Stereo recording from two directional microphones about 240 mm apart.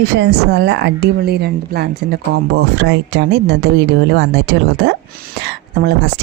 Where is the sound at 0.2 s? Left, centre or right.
Right.